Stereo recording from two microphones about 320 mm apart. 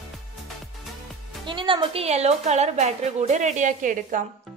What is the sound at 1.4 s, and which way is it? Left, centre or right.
A woman's voice, centre.